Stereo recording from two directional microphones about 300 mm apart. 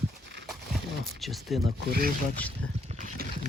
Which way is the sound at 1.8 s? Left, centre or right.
Right.